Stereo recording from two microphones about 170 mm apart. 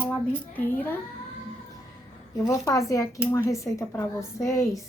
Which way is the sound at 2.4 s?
20° left (ahead or behind).